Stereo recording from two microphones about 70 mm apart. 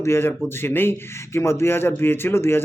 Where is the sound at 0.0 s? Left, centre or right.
Left.